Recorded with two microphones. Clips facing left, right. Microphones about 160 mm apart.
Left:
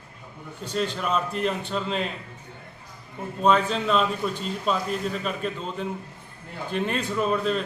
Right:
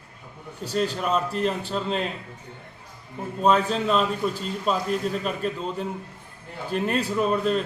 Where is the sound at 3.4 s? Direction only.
5° right (ahead or behind).